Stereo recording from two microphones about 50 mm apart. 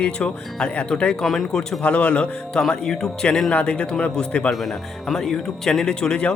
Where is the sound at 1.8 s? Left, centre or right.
Left.